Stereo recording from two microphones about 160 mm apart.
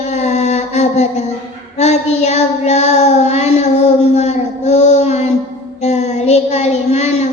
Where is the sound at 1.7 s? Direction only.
45° left (ahead or behind).